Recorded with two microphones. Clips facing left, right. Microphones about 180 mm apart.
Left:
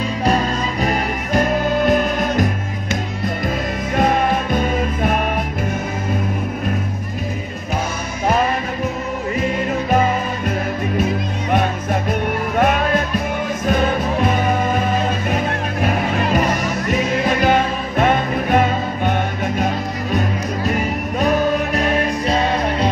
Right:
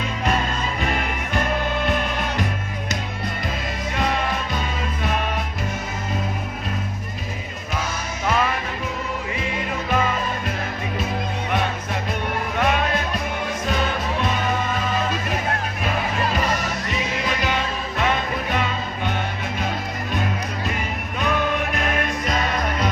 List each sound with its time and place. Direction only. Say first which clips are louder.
0.2 s music: left 5 dB; 35° left (ahead or behind)
3.9 s music: left 8 dB; 50° left (ahead or behind)
9.4 s music: left 7 dB; 45° left (ahead or behind)
11.5 s music: left 7 dB; 45° left (ahead or behind)
16.9 s music: left 9 dB; 50° left (ahead or behind)
20.7 s music: left 8 dB; 40° left (ahead or behind)